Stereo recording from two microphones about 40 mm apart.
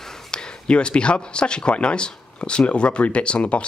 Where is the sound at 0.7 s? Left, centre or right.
Left.